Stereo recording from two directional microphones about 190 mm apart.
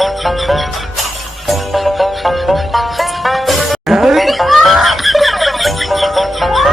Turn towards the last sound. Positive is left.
turn(degrees=0)  # may be behind; listen again after turning